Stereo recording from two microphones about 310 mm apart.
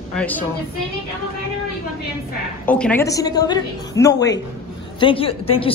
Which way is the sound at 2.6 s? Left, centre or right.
Centre.